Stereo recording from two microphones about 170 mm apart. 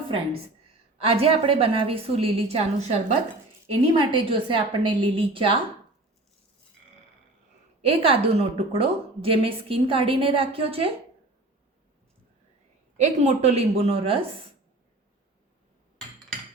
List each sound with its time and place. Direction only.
1.0 s a woman's voice: 35° right (ahead or behind)
7.8 s a woman's voice: 35° right (ahead or behind)
13.0 s a woman's voice: 40° right (ahead or behind)